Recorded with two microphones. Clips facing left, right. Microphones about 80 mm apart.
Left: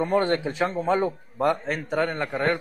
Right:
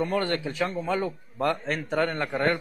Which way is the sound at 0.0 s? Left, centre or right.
Left.